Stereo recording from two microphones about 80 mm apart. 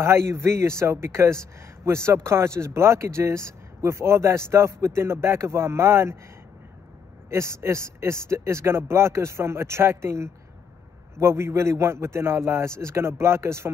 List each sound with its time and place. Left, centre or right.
0.0 s speech: right
7.2 s speech: right